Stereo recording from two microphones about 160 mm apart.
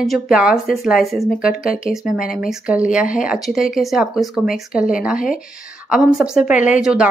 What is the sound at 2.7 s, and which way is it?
A woman's voice, 5° right (ahead or behind).